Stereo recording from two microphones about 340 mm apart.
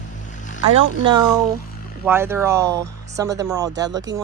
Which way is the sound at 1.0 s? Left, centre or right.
Centre.